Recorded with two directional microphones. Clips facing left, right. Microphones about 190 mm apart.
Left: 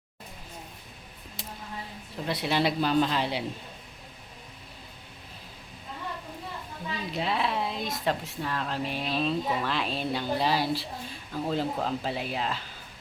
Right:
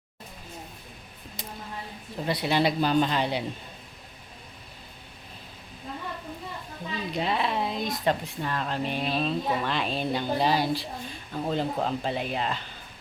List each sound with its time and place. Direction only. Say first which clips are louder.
2.2 s speech: right 2 dB; centre (ahead or behind)
7.1 s speech: right 1 dB; centre (ahead or behind)